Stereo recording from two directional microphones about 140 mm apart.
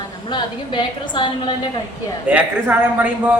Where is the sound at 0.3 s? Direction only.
35° left (ahead or behind).